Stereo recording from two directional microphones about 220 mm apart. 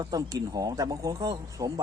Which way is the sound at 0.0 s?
15° right (ahead or behind).